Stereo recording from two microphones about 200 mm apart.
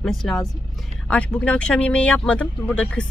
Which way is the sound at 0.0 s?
Centre (ahead or behind).